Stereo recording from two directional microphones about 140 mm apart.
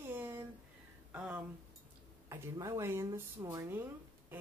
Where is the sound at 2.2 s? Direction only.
25° right (ahead or behind).